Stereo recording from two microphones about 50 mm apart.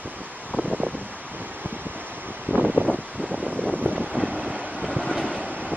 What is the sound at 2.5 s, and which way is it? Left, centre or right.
Wind, right.